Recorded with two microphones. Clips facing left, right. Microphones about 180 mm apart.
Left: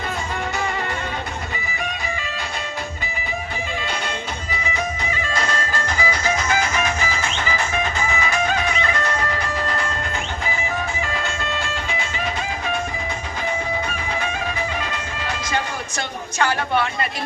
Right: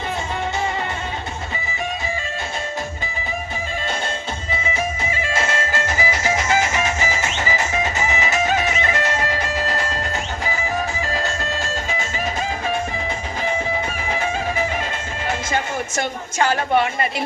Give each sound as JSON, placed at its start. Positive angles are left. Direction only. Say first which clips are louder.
{"t": 4.5, "sound": "music", "louder": "right 2 dB", "side_deg": -25}
{"t": 11.0, "sound": "music", "louder": "right 2 dB", "side_deg": -40}
{"t": 14.8, "sound": "music", "louder": "right 1 dB", "side_deg": -25}
{"t": 16.0, "sound": "a sound", "louder": "right 1 dB", "side_deg": -20}